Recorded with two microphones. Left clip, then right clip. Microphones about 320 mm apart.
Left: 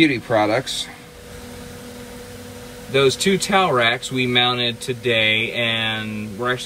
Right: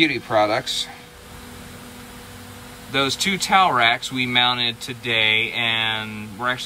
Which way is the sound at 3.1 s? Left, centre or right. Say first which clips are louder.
Left 3 dB; centre.